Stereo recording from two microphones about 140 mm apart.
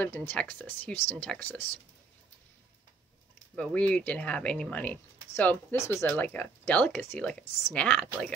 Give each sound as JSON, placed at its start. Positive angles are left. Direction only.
{"t": 0.0, "sound": "speech", "side_deg": 15}
{"t": 3.5, "sound": "speech", "side_deg": 10}